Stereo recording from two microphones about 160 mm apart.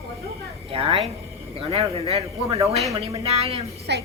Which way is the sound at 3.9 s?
90° right.